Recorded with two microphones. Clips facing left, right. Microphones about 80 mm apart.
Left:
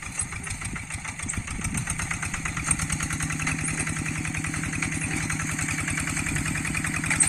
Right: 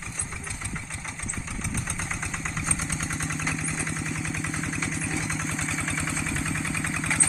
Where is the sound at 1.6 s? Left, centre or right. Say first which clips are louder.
Even; centre.